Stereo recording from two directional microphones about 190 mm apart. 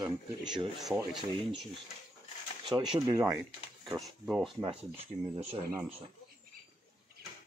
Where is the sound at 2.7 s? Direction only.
5° right (ahead or behind).